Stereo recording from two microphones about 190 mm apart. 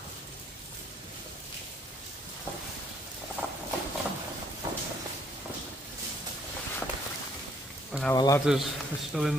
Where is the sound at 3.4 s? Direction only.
10° right (ahead or behind).